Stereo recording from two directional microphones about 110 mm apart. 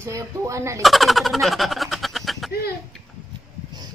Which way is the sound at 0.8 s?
Centre (ahead or behind).